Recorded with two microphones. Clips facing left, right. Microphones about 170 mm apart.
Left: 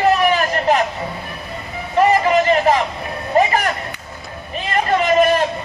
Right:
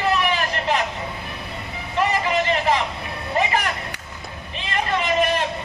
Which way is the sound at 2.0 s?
45° left (ahead or behind).